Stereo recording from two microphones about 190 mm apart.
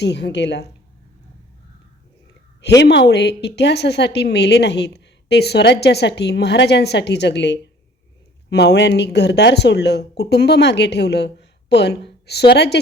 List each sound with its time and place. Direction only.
0.0 s a woman's voice: 65° left (ahead or behind)
2.6 s a woman's voice: 65° left (ahead or behind)